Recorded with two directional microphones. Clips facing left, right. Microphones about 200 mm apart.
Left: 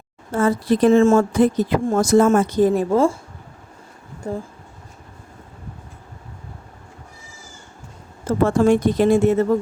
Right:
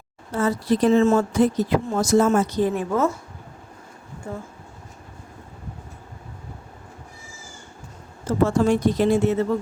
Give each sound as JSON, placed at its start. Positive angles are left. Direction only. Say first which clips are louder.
{"t": 0.3, "sound": "speech", "louder": "left 3 dB", "side_deg": 50}
{"t": 2.9, "sound": "speech", "louder": "left 5 dB", "side_deg": 30}
{"t": 4.2, "sound": "speech", "louder": "left 6 dB", "side_deg": 40}
{"t": 8.4, "sound": "speech", "louder": "left 4 dB", "side_deg": 55}